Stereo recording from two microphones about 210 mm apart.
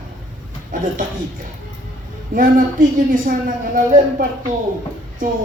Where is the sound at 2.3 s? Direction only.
40° right (ahead or behind).